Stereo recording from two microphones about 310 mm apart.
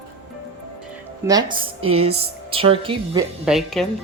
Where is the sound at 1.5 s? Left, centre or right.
Centre.